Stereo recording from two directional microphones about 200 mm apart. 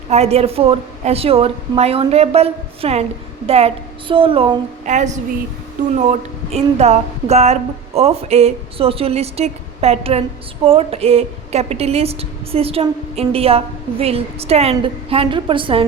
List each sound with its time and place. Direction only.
0.1 s a woman's voice: 30° right (ahead or behind)
4.9 s a woman's voice: 35° right (ahead or behind)